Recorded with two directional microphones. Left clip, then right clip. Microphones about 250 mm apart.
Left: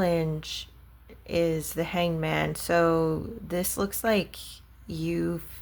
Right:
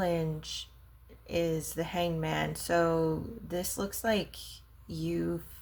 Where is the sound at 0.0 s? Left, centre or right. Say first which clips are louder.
Left 5 dB; centre.